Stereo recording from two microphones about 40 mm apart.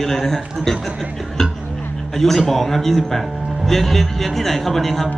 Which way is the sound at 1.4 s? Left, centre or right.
Centre.